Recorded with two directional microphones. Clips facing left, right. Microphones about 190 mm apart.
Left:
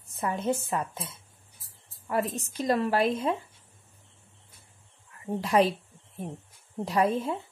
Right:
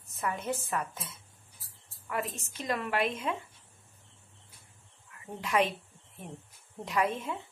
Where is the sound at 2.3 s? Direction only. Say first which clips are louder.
Left 8 dB; 35° left (ahead or behind).